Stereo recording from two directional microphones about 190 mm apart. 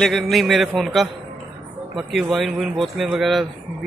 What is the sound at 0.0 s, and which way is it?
Speech, centre (ahead or behind).